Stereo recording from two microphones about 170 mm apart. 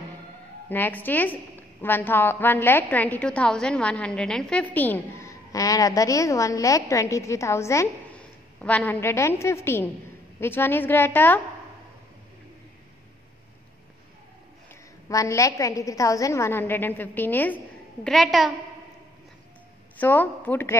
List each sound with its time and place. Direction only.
0.7 s a woman's voice: 10° left (ahead or behind)
15.0 s a woman's voice: 20° left (ahead or behind); by 18.5 s centre (ahead or behind)
20.0 s a woman's voice: 10° left (ahead or behind)